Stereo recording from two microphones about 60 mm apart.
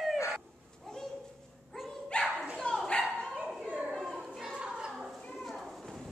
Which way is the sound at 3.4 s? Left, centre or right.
Centre.